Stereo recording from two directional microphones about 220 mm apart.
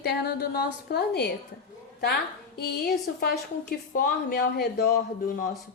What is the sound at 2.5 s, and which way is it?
A woman's voice, 45° left (ahead or behind).